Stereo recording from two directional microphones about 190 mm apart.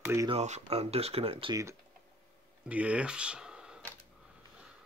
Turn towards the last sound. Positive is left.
turn(degrees=-5)  # may be behind; listen again after turning